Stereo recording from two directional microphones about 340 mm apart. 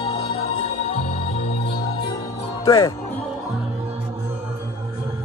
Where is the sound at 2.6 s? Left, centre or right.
Centre.